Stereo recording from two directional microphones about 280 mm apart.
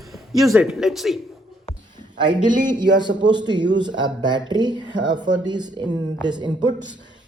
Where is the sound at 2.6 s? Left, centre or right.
Centre.